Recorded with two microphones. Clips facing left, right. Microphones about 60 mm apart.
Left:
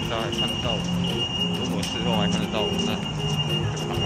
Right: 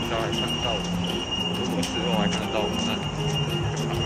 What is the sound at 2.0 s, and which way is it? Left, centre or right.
Speech, centre.